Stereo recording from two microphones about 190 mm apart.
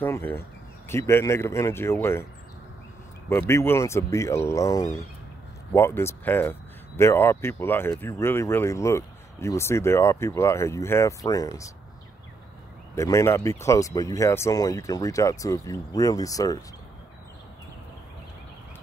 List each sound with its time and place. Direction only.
0.0 s speech: 10° left (ahead or behind)
3.3 s speech: 15° left (ahead or behind)
12.9 s speech: 15° left (ahead or behind)